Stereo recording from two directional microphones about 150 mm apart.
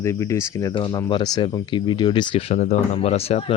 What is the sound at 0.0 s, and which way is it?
Speech, 20° left (ahead or behind).